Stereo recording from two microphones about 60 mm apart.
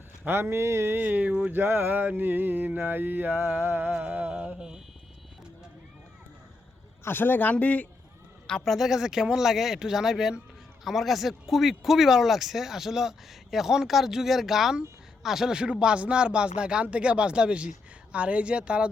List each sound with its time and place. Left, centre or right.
0.3 s speech: right
0.9 s a sound: right
4.0 s mantra: right
7.0 s a man's voice: left
8.6 s speech: centre